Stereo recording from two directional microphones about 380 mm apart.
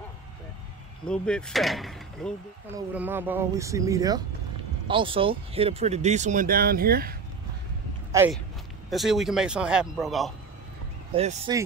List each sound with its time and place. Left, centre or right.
1.0 s speech: centre; by 7.2 s right
8.1 s speech: centre
11.1 s speech: centre